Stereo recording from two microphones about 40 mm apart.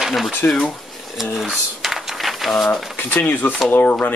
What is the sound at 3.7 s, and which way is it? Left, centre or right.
Speech, left.